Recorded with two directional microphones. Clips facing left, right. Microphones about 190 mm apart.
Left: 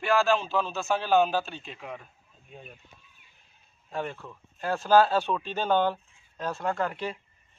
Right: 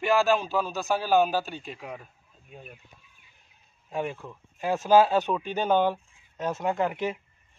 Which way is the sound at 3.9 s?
10° right (ahead or behind).